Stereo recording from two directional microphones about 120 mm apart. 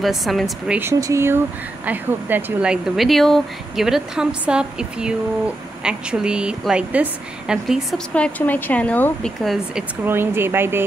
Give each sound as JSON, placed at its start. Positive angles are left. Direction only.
{"t": 0.0, "sound": "a woman's voice", "side_deg": 0}
{"t": 0.7, "sound": "a woman's voice", "side_deg": -20}
{"t": 8.1, "sound": "speech", "side_deg": 10}
{"t": 9.4, "sound": "a woman's voice", "side_deg": 0}
{"t": 10.0, "sound": "speech", "side_deg": -20}